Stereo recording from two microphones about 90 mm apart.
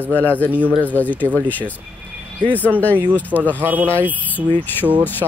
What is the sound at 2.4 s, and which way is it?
Speech, 20° right (ahead or behind).